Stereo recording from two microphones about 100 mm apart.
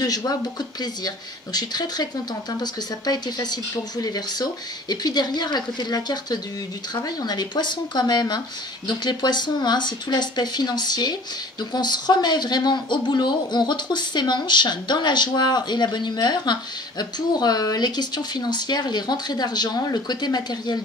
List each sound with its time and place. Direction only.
0.0 s speech: 40° left (ahead or behind)